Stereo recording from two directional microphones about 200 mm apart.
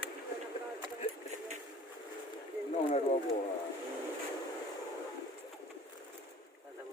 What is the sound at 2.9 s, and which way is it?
Speech, 30° left (ahead or behind).